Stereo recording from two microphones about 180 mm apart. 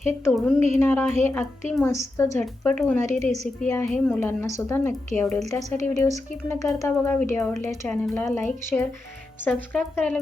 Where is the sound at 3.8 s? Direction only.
5° left (ahead or behind).